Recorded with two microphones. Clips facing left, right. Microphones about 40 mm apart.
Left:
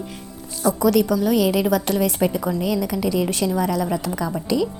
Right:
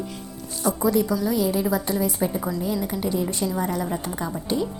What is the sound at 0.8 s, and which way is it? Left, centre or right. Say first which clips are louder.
Speech: left 4 dB; left.